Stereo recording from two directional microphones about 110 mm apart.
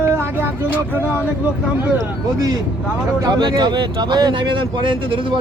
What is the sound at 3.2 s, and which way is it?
Speech, 40° right (ahead or behind).